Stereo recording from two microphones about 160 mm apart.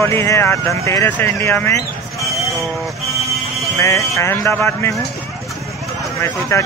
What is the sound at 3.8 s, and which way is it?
Speech, 20° left (ahead or behind).